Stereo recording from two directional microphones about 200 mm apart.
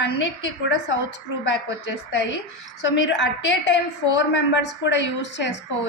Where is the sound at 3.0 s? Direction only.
60° left (ahead or behind).